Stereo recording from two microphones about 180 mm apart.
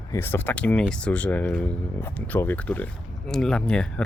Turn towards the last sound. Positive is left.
turn(degrees=5)  # may be behind; listen again after turning